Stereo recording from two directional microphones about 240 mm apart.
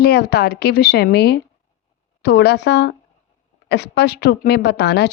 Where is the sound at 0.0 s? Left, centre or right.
Left.